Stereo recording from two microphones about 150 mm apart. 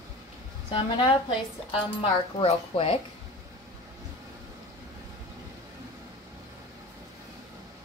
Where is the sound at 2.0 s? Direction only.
35° left (ahead or behind).